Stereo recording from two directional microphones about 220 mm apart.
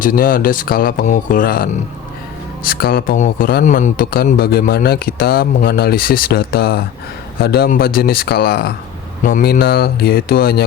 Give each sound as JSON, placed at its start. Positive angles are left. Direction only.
{"t": 0.0, "sound": "speech", "side_deg": 40}